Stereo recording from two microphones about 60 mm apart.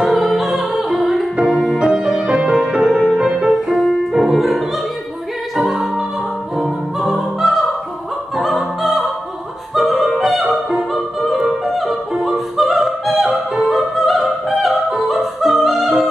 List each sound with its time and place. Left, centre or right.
0.0 s music: centre
8.4 s opera: centre
9.8 s music: centre